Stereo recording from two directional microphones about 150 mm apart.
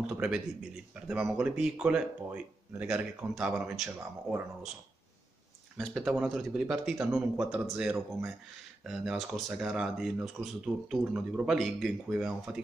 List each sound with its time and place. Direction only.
0.0 s speech: 5° right (ahead or behind)
5.8 s speech: centre (ahead or behind)